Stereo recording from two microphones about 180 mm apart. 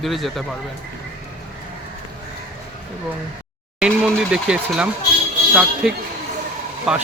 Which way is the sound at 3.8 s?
5° right (ahead or behind).